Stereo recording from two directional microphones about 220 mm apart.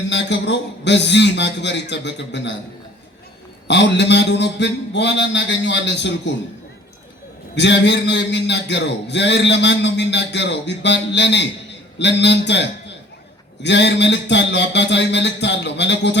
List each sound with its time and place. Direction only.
0.1 s a man's voice: 55° left (ahead or behind)
3.7 s a man's voice: 50° left (ahead or behind)
7.5 s a man's voice: 55° left (ahead or behind)